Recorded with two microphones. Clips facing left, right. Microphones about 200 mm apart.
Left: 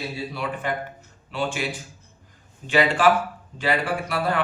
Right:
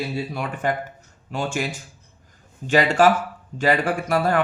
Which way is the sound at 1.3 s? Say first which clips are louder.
Even; 45° right (ahead or behind).